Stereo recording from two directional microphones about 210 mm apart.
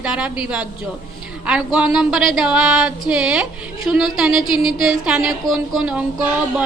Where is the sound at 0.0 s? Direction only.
5° right (ahead or behind).